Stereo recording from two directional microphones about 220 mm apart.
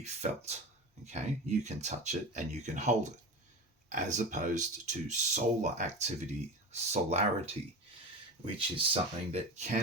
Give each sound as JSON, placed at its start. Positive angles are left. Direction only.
{"t": 0.0, "sound": "speech", "side_deg": -30}
{"t": 8.5, "sound": "speech", "side_deg": -25}